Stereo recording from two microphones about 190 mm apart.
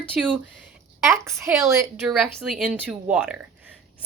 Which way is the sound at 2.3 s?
5° right (ahead or behind).